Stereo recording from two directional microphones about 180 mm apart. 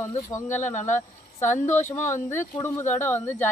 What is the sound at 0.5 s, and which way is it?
Speech, 40° left (ahead or behind).